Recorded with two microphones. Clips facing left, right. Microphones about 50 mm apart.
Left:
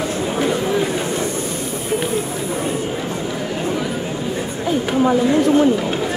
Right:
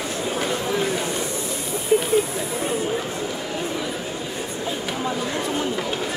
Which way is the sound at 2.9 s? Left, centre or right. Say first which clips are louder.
Left 2 dB; centre.